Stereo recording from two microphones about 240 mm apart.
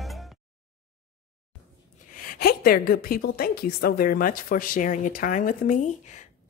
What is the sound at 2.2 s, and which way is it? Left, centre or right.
A woman's voice, left.